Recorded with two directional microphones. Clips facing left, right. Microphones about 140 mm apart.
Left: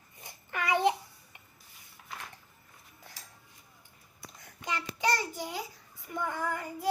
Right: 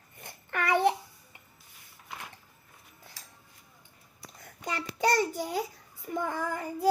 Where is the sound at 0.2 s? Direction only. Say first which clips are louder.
Right 3 dB; 55° right (ahead or behind).